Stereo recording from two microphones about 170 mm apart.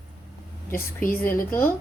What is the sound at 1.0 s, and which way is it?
Speech, 55° left (ahead or behind).